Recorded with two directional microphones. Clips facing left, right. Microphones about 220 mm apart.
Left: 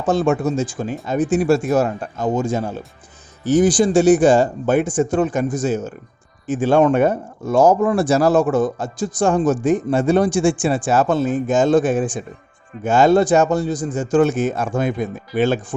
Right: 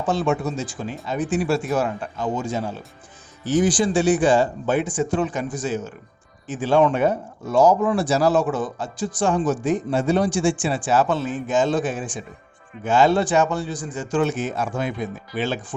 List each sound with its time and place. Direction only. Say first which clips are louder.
0.0 s speech: left 5 dB; 45° left (ahead or behind)